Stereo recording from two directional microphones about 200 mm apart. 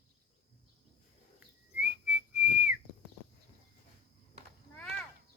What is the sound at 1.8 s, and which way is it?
Whistling, 5° right (ahead or behind).